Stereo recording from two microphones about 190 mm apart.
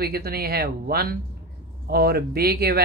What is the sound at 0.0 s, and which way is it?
Speech, 55° right (ahead or behind).